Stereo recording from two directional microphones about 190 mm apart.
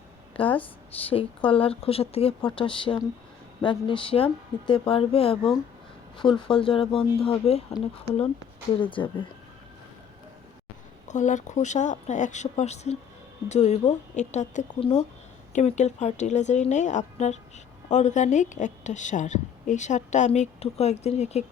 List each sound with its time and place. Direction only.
0.4 s a woman's voice: 30° left (ahead or behind)
8.7 s speech: 25° left (ahead or behind)
11.1 s a woman's voice: 40° left (ahead or behind)